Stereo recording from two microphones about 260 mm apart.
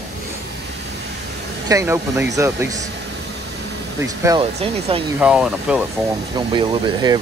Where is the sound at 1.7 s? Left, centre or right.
Centre.